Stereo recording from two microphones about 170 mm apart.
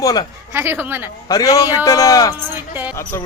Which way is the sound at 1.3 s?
20° left (ahead or behind).